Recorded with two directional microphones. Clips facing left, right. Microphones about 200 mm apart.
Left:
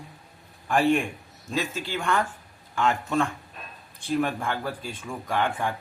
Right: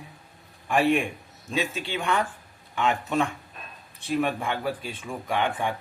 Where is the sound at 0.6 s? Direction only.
10° right (ahead or behind).